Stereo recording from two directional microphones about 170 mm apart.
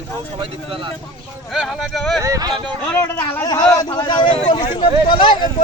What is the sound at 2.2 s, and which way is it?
Speech, 20° right (ahead or behind).